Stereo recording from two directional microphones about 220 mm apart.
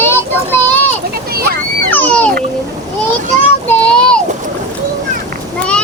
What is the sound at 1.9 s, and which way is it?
Speech, 5° left (ahead or behind).